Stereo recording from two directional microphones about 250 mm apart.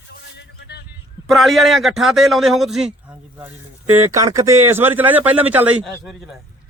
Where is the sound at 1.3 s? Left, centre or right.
Centre.